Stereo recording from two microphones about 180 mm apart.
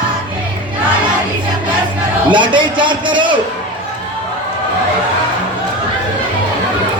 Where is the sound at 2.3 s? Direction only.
25° right (ahead or behind).